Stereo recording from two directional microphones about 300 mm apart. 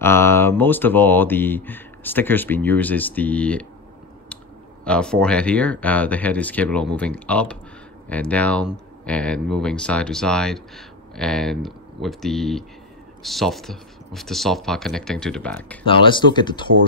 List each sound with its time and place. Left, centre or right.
0.0 s speech: centre
4.8 s speech: centre
15.8 s speech: centre